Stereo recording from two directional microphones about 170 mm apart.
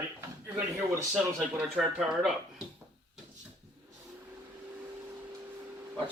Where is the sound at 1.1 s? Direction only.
5° right (ahead or behind).